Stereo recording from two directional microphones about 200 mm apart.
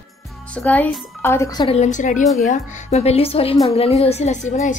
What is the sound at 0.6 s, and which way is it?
Speech, 5° left (ahead or behind).